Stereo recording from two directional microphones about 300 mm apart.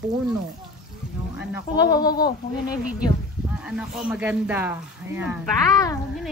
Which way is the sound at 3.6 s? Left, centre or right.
Centre.